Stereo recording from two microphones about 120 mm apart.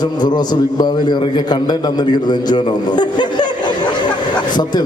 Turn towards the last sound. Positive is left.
turn(degrees=40)  # may be behind; listen again after turning